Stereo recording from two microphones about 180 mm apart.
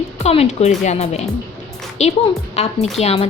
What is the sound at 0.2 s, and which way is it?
A woman's voice, 35° left (ahead or behind).